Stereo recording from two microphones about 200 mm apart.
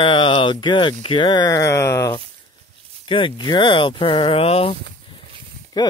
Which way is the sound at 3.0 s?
25° left (ahead or behind).